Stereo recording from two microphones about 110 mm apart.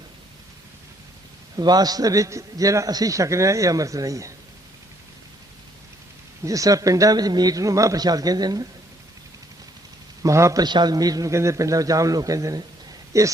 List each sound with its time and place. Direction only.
1.5 s a man's voice: 35° right (ahead or behind)
6.4 s a man's voice: 30° right (ahead or behind)
10.2 s a man's voice: 30° right (ahead or behind)
10.6 s a man's voice: 40° right (ahead or behind)